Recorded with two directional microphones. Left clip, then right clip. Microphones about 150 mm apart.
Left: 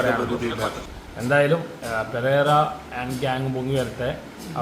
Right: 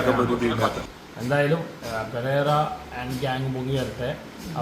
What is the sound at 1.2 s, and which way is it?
A man's voice, 20° left (ahead or behind).